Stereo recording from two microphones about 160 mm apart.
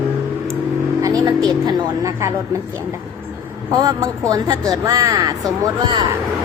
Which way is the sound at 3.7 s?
25° right (ahead or behind).